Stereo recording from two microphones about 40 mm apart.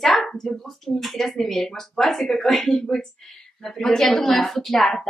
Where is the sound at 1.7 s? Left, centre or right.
Centre.